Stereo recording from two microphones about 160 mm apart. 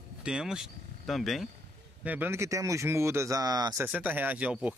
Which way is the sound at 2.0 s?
10° right (ahead or behind).